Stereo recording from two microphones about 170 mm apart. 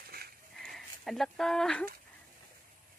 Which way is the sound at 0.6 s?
Centre (ahead or behind).